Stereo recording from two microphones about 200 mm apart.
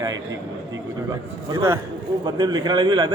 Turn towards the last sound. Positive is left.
turn(degrees=-25)  # may be behind; listen again after turning